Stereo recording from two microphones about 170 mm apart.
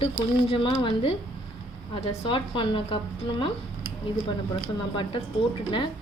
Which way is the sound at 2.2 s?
30° left (ahead or behind).